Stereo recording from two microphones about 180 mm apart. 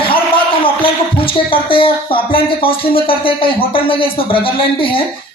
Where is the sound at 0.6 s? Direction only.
30° left (ahead or behind).